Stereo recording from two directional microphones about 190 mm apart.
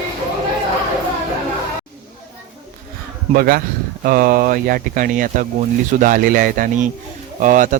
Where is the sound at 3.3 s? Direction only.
50° right (ahead or behind).